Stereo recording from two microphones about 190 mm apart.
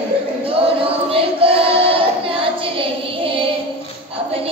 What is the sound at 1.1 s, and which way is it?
Child singing, 30° right (ahead or behind).